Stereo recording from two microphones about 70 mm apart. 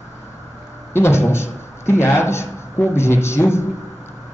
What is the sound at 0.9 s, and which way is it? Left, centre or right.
A man's voice, left.